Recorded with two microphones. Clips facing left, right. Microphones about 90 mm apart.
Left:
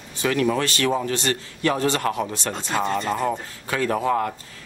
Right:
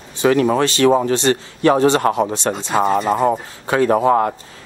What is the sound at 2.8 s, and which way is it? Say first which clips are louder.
Speech: right 8 dB; 35° right (ahead or behind).